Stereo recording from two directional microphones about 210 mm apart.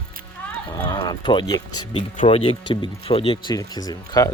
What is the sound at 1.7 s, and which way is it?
Speech, 90° left.